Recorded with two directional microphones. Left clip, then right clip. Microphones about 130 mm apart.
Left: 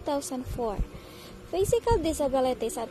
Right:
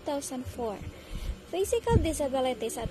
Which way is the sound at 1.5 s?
35° left (ahead or behind).